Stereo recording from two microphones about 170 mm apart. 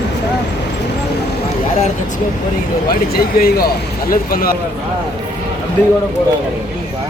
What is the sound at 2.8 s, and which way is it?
Speech, 60° left (ahead or behind).